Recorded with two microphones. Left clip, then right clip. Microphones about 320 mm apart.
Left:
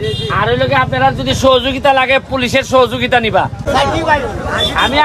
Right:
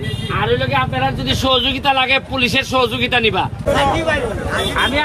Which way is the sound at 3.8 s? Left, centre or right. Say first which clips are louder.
Left 5 dB; left.